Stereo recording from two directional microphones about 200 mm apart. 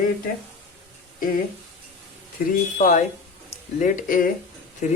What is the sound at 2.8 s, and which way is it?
Speech, 40° left (ahead or behind).